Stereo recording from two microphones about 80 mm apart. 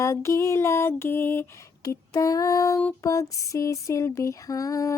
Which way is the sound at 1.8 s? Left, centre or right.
Left.